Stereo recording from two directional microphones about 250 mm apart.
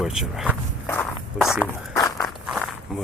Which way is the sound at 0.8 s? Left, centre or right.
Centre.